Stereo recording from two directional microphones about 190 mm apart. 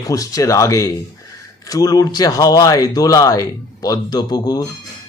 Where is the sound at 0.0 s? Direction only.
20° left (ahead or behind).